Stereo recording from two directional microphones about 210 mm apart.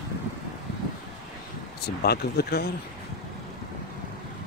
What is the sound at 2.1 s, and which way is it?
Speech, 50° left (ahead or behind).